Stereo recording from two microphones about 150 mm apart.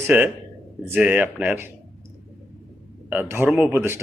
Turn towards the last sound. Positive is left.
turn(degrees=-15)  # may be behind; listen again after turning